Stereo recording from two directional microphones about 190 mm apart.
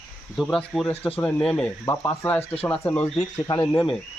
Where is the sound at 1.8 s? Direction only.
15° left (ahead or behind).